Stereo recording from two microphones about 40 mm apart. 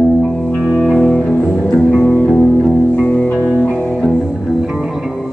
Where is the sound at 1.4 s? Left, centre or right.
Left.